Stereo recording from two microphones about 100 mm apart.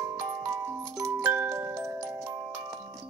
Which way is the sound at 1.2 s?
20° right (ahead or behind).